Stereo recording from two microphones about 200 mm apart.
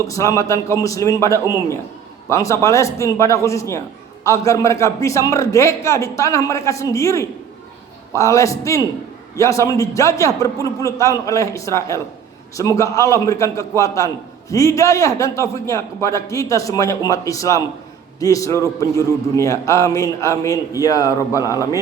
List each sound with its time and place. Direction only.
0.1 s a man's voice: 15° left (ahead or behind)